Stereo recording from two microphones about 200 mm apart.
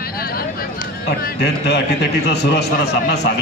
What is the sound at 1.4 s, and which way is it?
A man's voice, 60° left (ahead or behind).